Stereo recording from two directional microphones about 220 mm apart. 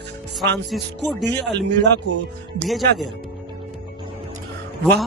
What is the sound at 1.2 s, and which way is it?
Speech, 50° right (ahead or behind).